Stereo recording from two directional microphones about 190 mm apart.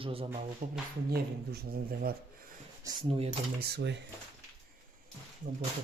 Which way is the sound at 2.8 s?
20° right (ahead or behind).